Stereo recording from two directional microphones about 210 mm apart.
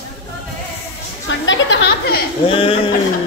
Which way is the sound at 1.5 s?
60° left (ahead or behind).